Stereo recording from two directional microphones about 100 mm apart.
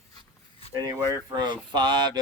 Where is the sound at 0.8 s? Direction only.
40° right (ahead or behind).